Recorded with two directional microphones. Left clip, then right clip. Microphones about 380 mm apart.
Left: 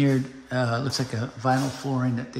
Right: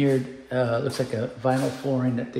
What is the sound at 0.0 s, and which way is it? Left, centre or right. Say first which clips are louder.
Speech: right 2 dB; centre.